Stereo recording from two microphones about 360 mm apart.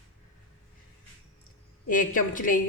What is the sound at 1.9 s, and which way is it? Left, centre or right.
Speech, left.